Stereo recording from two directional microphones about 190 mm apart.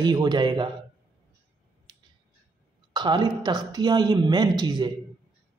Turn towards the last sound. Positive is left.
turn(degrees=-20)  # may be behind; listen again after turning